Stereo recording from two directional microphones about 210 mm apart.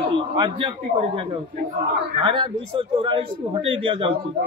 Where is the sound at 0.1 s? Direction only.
25° right (ahead or behind).